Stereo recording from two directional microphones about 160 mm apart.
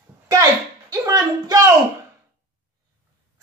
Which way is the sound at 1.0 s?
20° right (ahead or behind).